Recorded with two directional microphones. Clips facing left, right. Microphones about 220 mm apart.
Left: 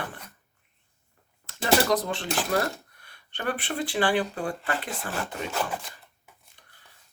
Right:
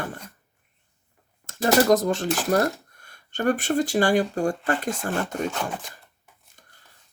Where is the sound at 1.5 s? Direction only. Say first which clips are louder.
Right 5 dB; 45° right (ahead or behind).